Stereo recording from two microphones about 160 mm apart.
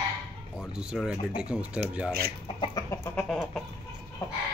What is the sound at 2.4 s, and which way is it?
Chicken, 30° left (ahead or behind).